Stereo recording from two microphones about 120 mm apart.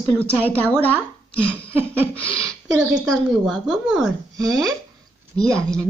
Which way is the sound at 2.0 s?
10° left (ahead or behind).